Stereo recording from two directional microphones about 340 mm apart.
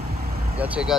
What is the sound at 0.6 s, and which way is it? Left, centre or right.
Speech, centre.